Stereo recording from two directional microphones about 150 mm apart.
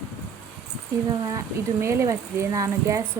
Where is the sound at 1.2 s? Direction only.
20° right (ahead or behind).